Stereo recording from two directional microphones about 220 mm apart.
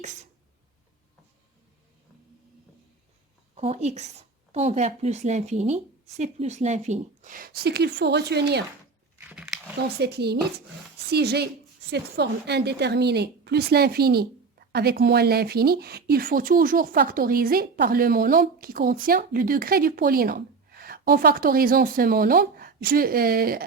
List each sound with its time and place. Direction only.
3.5 s speech: 25° right (ahead or behind); by 8.6 s 50° right (ahead or behind)
9.1 s dog: 5° right (ahead or behind)
10.0 s a woman's voice: 50° right (ahead or behind)